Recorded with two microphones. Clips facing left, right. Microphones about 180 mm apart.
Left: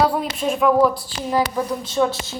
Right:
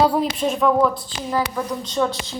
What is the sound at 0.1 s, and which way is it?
A woman's voice, 5° left (ahead or behind).